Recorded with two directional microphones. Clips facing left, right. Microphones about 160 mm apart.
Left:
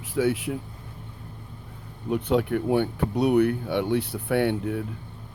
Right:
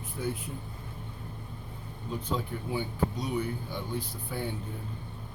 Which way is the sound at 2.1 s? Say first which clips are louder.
Left 11 dB; 70° left (ahead or behind).